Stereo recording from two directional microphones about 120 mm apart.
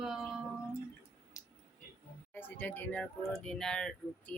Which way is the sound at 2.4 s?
15° left (ahead or behind).